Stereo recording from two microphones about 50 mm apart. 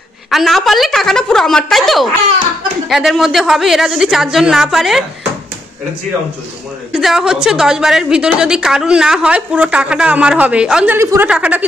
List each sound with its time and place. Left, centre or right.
0.3 s a woman's voice: centre
6.9 s a woman's voice: centre; by 11.6 s right